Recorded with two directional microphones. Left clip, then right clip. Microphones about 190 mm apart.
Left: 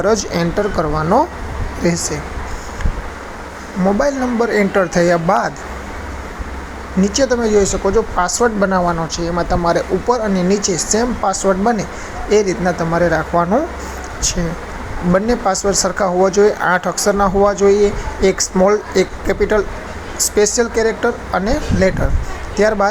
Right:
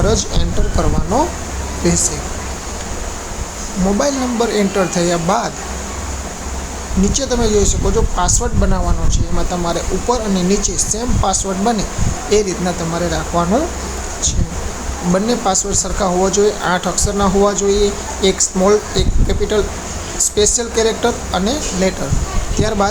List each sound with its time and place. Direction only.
0.0 s speech: 25° left (ahead or behind)
3.9 s speech: 20° left (ahead or behind)
7.0 s speech: 20° left (ahead or behind)
15.1 s speech: 20° left (ahead or behind)